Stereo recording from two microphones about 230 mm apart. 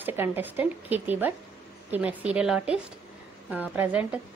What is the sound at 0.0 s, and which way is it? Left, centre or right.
A woman's voice, centre.